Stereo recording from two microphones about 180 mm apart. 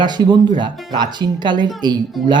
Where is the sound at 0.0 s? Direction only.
25° right (ahead or behind).